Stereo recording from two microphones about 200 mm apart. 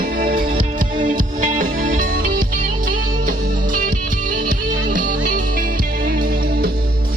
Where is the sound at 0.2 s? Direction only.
45° right (ahead or behind).